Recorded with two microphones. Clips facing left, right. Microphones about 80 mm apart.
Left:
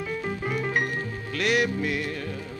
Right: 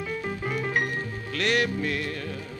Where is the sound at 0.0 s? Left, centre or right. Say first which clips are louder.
Left 1 dB; centre.